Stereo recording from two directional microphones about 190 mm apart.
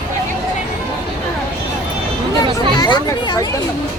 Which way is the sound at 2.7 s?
20° left (ahead or behind).